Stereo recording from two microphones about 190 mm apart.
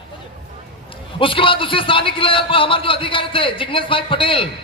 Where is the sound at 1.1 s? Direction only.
25° left (ahead or behind).